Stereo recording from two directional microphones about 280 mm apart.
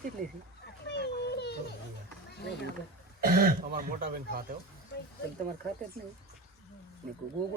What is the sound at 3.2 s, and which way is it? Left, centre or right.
Speech, right.